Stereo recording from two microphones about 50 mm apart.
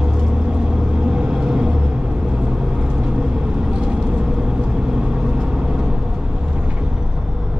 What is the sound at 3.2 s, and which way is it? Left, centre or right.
Vehicle, centre.